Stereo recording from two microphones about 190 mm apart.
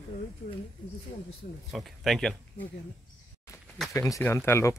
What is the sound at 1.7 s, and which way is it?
Speech, centre (ahead or behind).